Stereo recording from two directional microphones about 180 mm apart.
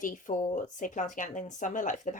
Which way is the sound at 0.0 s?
45° left (ahead or behind).